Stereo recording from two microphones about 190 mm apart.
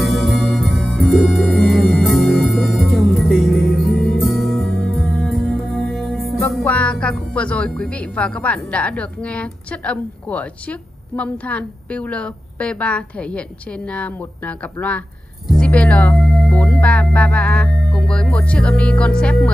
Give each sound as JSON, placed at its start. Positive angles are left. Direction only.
{"t": 0.0, "sound": "music", "side_deg": 0}
{"t": 6.6, "sound": "a woman's voice", "side_deg": 5}